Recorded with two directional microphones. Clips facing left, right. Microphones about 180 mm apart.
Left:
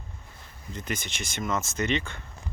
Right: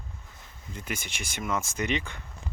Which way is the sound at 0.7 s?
10° right (ahead or behind).